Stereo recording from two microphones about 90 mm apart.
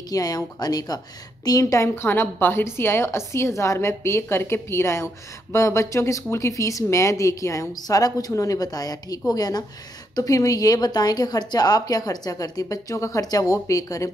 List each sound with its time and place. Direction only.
0.1 s a woman's voice: 45° left (ahead or behind)